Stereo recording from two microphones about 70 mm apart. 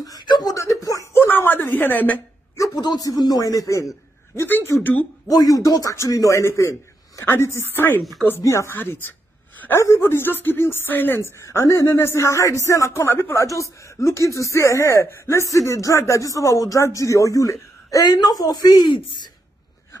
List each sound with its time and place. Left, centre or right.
0.0 s speech: left
0.6 s speech: left
1.1 s speech: left
2.5 s a sound: left
2.8 s a man's voice: left
4.4 s speech: left
5.3 s speech: left
8.4 s speech: left
9.8 s speech: left
11.4 s speech: left
13.0 s speech: left
18.1 s speech: left